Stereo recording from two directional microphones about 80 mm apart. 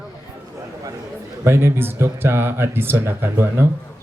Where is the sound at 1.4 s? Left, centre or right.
Right.